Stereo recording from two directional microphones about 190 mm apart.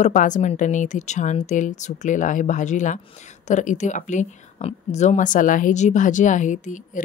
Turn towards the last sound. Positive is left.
turn(degrees=40)  # may be behind; listen again after turning